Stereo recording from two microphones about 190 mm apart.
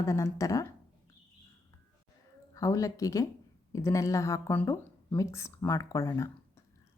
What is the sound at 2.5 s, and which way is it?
A woman's voice, 15° left (ahead or behind).